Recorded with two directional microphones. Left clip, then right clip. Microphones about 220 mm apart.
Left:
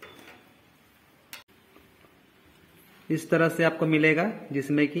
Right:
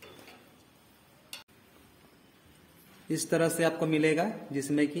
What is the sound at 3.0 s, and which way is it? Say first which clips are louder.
A man's voice: left 4 dB; 20° left (ahead or behind).